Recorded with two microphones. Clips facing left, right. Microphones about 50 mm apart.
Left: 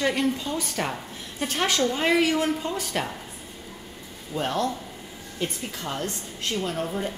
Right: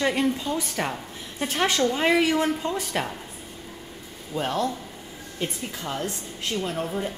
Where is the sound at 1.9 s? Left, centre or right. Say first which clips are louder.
Right 1 dB; centre.